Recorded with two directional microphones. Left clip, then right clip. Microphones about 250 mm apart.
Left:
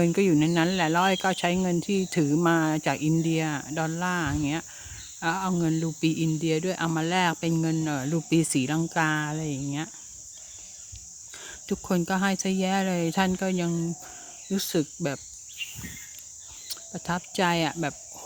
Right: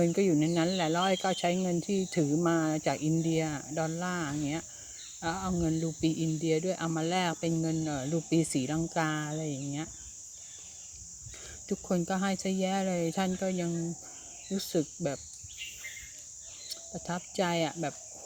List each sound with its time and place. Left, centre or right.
0.0 s speech: left
11.7 s speech: left
16.6 s speech: left